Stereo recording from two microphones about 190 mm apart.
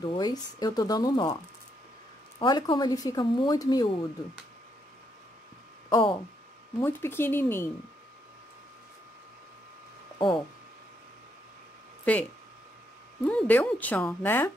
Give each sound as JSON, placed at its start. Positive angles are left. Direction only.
{"t": 0.0, "sound": "speech", "side_deg": 25}
{"t": 2.3, "sound": "speech", "side_deg": 25}
{"t": 5.9, "sound": "speech", "side_deg": 25}
{"t": 6.8, "sound": "speech", "side_deg": 10}
{"t": 10.1, "sound": "speech", "side_deg": 25}
{"t": 12.0, "sound": "speech", "side_deg": 10}